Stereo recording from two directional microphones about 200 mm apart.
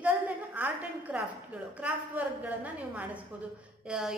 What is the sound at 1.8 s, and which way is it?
A woman's voice, 5° right (ahead or behind).